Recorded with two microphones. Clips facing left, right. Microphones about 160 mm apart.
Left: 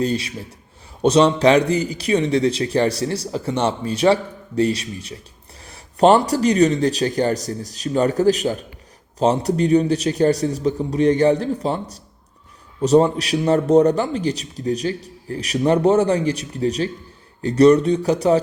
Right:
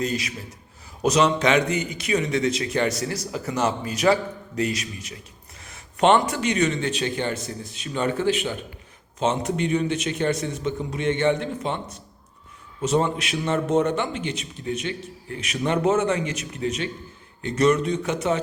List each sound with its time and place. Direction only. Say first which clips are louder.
0.0 s a man's voice: left 5 dB; 30° left (ahead or behind)